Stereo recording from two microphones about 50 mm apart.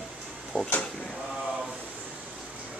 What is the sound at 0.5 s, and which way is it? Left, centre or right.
Speech, centre.